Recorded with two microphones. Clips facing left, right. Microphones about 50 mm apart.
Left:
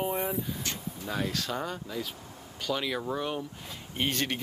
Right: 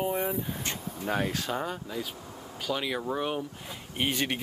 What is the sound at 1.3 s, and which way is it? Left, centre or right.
Speech, centre.